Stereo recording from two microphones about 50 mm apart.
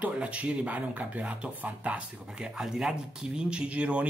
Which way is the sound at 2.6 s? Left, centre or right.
Centre.